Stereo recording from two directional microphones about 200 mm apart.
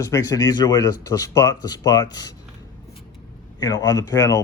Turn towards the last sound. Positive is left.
turn(degrees=15)  # may be behind; listen again after turning